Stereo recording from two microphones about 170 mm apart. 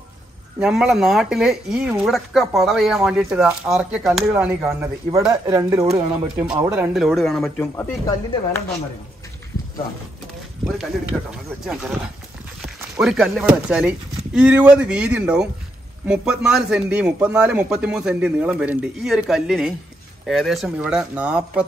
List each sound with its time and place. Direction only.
0.6 s speech: 5° right (ahead or behind)
6.9 s speech: centre (ahead or behind)
10.6 s speech: centre (ahead or behind)
13.0 s speech: centre (ahead or behind)